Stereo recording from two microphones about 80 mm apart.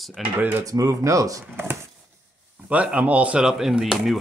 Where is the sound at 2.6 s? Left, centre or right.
Centre.